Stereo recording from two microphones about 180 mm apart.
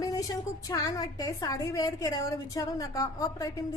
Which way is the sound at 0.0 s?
20° left (ahead or behind).